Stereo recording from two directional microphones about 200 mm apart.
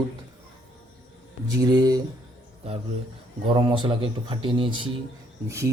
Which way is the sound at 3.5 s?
25° right (ahead or behind).